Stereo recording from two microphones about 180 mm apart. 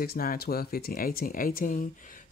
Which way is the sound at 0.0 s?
55° left (ahead or behind).